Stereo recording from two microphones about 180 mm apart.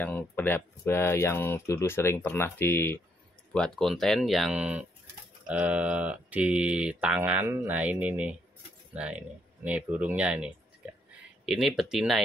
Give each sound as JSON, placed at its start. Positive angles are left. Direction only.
{"t": 0.0, "sound": "speech", "side_deg": 10}